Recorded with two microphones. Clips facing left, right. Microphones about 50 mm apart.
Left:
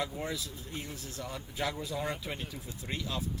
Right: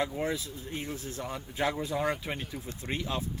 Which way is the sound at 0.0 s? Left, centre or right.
Right.